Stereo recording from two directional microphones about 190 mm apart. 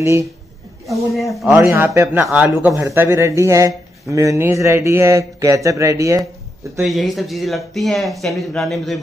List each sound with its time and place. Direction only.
0.0 s speech: 15° right (ahead or behind)
1.3 s speech: centre (ahead or behind)
1.6 s speech: 15° right (ahead or behind)
6.8 s speech: centre (ahead or behind)